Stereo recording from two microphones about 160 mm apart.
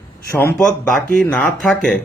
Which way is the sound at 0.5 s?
5° left (ahead or behind).